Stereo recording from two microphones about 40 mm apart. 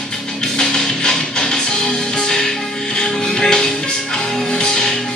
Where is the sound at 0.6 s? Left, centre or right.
Centre.